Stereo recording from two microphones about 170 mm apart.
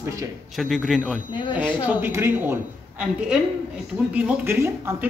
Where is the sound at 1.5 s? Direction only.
15° right (ahead or behind).